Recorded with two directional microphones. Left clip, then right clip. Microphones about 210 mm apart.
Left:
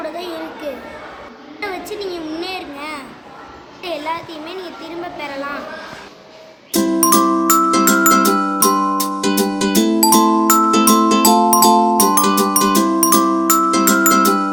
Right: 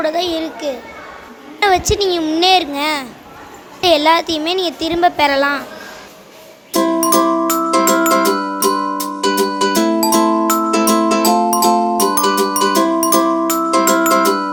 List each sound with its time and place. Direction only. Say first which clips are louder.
0.0 s a sound: right 8 dB; 50° right (ahead or behind)
1.9 s a woman's voice: right 9 dB; 50° right (ahead or behind)
6.8 s music: even; 15° right (ahead or behind)
14.3 s glockenspiel: even; 10° right (ahead or behind)